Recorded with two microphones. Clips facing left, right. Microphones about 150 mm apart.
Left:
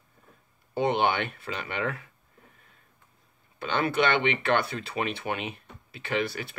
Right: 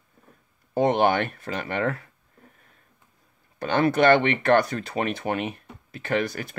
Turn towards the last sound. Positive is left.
turn(degrees=-45)  # may be behind; listen again after turning